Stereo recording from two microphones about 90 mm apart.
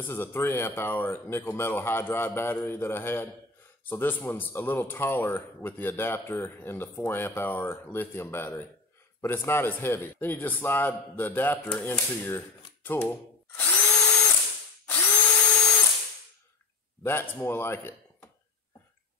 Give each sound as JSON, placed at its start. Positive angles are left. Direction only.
{"t": 0.0, "sound": "speech", "side_deg": 25}
{"t": 11.7, "sound": "speech", "side_deg": 10}
{"t": 12.3, "sound": "speech", "side_deg": 25}
{"t": 13.6, "sound": "drill", "side_deg": 15}
{"t": 14.9, "sound": "drill", "side_deg": 20}
{"t": 17.0, "sound": "speech", "side_deg": 25}